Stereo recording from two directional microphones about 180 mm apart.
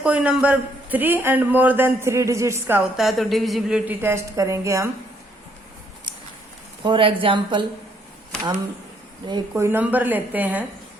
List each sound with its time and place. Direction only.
0.0 s speech: 5° right (ahead or behind)
6.8 s a woman's voice: 30° right (ahead or behind)
9.2 s a woman's voice: 25° right (ahead or behind)
9.6 s speech: 10° right (ahead or behind)